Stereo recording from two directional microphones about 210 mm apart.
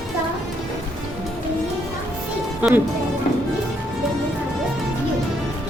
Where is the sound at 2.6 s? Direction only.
5° right (ahead or behind).